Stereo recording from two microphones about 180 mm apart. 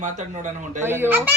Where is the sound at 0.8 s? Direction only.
10° right (ahead or behind).